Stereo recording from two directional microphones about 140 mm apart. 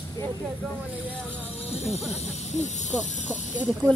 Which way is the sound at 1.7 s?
50° left (ahead or behind).